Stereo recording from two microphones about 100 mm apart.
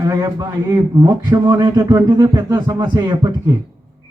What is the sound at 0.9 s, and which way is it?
Speech, 35° right (ahead or behind).